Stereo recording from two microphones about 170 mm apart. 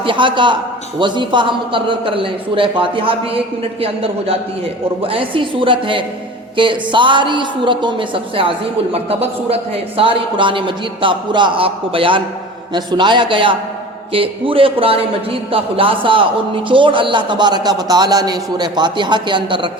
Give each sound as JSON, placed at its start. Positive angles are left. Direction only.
{"t": 0.0, "sound": "a man's voice", "side_deg": -30}